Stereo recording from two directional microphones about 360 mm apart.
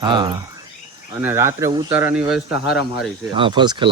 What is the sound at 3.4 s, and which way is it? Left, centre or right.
Speech, centre.